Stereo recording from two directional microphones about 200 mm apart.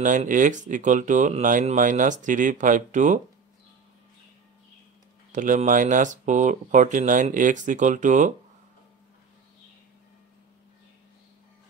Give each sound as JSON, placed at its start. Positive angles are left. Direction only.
{"t": 0.0, "sound": "speech", "side_deg": -40}
{"t": 5.3, "sound": "speech", "side_deg": -40}